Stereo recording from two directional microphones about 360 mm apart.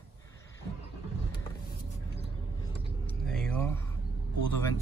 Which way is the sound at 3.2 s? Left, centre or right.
Centre.